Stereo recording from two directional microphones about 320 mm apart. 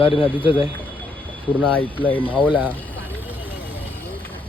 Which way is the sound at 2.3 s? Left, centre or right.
Centre.